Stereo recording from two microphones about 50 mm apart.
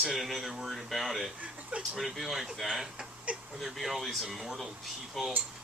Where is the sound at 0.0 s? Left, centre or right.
Centre.